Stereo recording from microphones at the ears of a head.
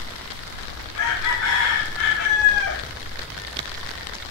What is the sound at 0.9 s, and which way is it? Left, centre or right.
Chicken, left.